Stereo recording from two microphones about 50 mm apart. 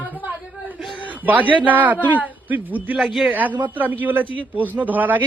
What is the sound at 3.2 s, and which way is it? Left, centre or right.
A man's voice, right.